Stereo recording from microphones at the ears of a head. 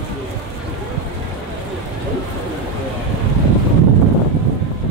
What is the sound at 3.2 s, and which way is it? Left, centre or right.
Vehicle, right.